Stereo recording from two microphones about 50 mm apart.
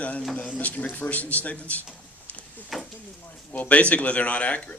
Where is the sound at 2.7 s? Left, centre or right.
Centre.